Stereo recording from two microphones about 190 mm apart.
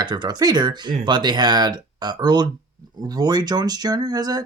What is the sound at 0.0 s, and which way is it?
Speech, 25° right (ahead or behind).